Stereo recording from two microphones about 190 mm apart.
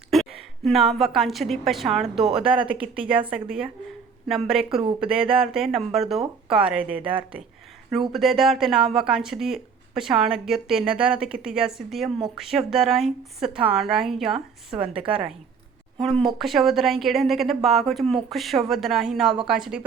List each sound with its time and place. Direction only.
0.1 s a woman's voice: centre (ahead or behind)
4.8 s speech: 25° right (ahead or behind)
5.5 s a woman's voice: centre (ahead or behind)
7.0 s speech: 25° right (ahead or behind)
7.9 s speech: centre (ahead or behind)
16.0 s speech: centre (ahead or behind)